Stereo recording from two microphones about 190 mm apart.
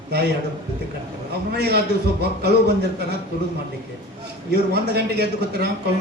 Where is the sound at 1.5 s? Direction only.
60° right (ahead or behind).